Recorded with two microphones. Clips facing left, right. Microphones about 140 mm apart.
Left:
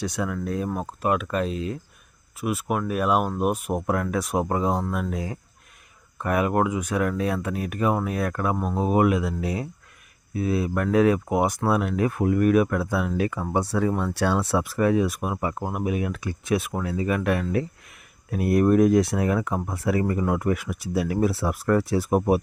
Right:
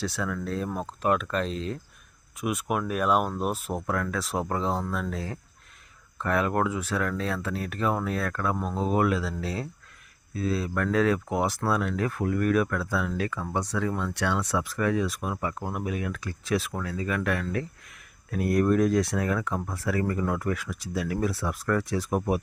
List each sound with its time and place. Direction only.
0.0 s speech: 15° left (ahead or behind)